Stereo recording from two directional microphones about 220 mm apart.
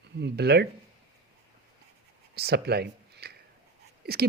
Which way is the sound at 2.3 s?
45° right (ahead or behind).